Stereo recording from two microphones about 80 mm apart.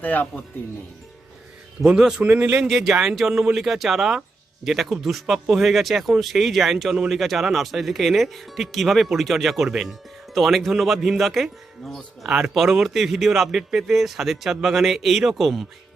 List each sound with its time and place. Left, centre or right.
0.0 s speech: left
1.9 s a man's voice: centre
2.2 s speech: right
2.6 s a man's voice: centre